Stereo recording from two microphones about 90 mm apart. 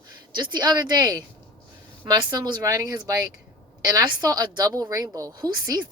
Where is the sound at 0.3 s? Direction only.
55° right (ahead or behind).